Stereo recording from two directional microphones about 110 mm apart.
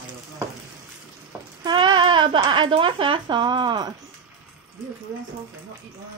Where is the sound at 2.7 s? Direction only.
50° right (ahead or behind).